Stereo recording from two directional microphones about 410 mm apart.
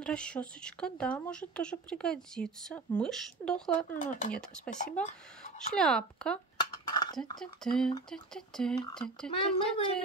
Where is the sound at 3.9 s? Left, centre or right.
Centre.